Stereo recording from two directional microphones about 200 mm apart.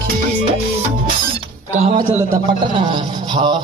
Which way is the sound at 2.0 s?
20° right (ahead or behind).